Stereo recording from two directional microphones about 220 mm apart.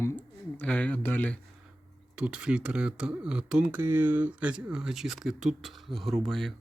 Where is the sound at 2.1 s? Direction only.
5° right (ahead or behind).